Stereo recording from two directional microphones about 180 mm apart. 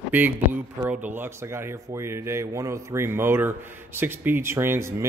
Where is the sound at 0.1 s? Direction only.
10° right (ahead or behind).